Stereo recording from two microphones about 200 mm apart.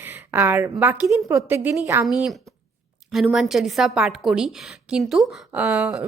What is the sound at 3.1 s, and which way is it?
A woman's voice, centre (ahead or behind).